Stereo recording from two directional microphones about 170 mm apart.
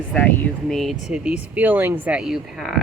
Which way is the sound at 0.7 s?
Centre (ahead or behind).